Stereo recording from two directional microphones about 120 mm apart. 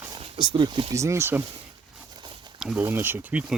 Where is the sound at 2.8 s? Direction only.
20° right (ahead or behind).